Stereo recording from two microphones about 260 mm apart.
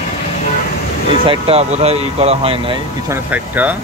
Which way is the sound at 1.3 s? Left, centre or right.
Right.